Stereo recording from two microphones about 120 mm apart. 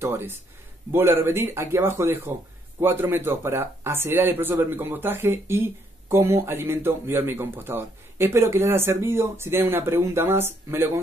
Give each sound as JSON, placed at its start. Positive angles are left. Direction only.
{"t": 0.0, "sound": "speech", "side_deg": -20}